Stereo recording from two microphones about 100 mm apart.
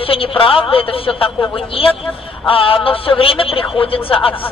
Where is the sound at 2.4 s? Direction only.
65° left (ahead or behind).